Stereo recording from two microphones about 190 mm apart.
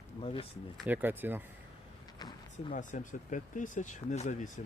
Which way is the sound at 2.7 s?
40° left (ahead or behind).